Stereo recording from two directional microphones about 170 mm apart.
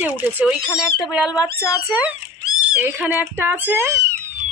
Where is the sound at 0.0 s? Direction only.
5° right (ahead or behind).